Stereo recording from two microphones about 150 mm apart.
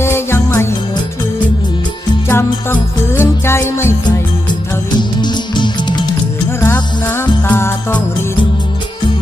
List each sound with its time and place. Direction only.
0.0 s music: 15° left (ahead or behind)
2.2 s music: 10° left (ahead or behind)
4.0 s music: 30° left (ahead or behind)
6.6 s music: 15° left (ahead or behind)